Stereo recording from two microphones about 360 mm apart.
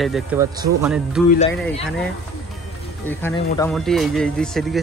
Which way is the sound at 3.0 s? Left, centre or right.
Centre.